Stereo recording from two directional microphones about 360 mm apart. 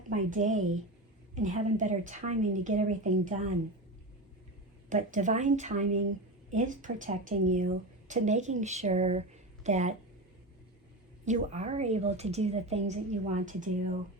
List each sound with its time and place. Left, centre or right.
0.1 s a woman's voice: centre
4.9 s a woman's voice: right
11.3 s speech: centre